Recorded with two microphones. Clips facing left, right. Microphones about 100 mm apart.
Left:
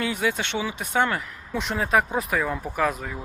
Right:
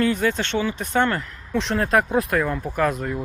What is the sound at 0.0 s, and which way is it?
Speech, 10° left (ahead or behind).